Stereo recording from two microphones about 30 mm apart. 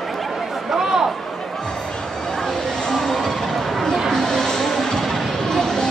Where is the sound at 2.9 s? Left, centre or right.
Centre.